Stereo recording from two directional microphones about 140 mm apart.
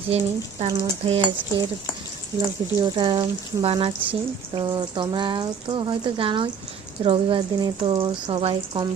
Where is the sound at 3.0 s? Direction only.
35° right (ahead or behind).